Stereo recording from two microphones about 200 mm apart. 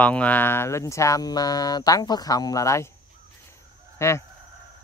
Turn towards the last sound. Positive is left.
turn(degrees=15)  # may be behind; listen again after turning